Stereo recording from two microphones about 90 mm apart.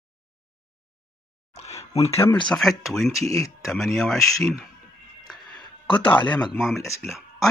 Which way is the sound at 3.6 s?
Centre (ahead or behind).